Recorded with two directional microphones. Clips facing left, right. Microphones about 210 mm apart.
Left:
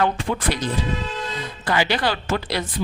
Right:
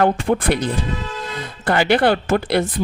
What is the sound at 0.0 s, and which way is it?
Speech, 50° right (ahead or behind).